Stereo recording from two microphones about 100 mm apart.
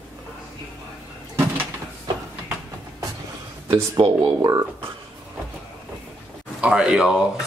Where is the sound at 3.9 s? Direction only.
45° right (ahead or behind).